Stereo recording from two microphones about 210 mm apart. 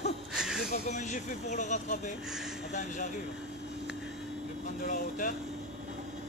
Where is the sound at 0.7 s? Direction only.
35° left (ahead or behind).